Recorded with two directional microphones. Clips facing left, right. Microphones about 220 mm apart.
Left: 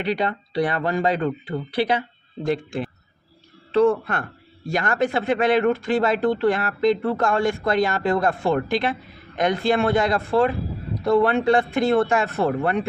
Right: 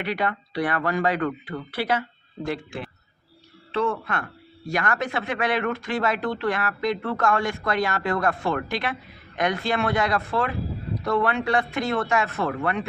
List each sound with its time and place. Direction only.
0.0 s speech: 25° left (ahead or behind)
3.7 s speech: 35° left (ahead or behind)